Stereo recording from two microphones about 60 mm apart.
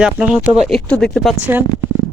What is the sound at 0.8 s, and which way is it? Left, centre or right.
Speech, centre.